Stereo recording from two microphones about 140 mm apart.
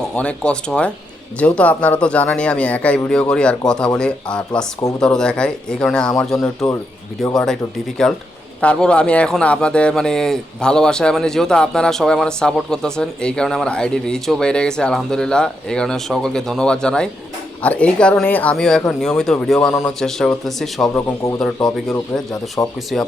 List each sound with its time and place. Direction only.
0.2 s speech: 10° left (ahead or behind)
20.9 s speech: 20° left (ahead or behind)
22.6 s speech: 15° left (ahead or behind)